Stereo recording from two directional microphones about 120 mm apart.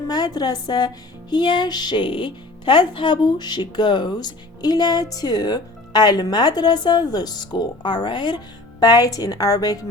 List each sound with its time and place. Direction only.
0.1 s speech: 35° left (ahead or behind)